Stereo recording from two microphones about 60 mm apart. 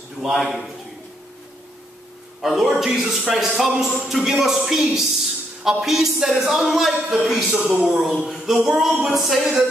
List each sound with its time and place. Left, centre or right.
0.2 s a man's voice: centre
2.4 s a man's voice: centre
7.5 s a man's voice: centre
8.0 s a sound: centre
8.6 s a man's voice: centre